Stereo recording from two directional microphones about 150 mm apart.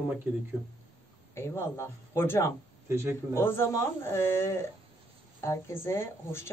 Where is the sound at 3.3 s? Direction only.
15° left (ahead or behind).